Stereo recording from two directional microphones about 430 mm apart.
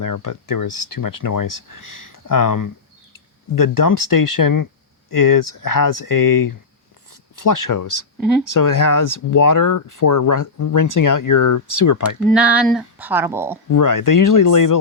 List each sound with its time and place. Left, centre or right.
0.0 s speech: left
12.3 s speech: centre
13.7 s speech: left